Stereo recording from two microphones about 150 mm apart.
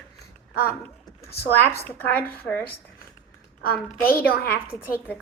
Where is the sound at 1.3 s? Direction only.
90° left.